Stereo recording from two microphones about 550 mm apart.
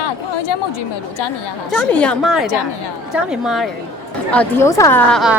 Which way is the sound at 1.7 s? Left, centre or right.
Centre.